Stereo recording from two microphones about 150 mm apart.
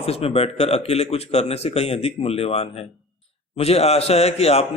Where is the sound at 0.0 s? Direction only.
40° left (ahead or behind).